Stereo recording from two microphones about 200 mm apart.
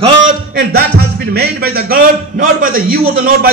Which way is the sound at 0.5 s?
50° right (ahead or behind).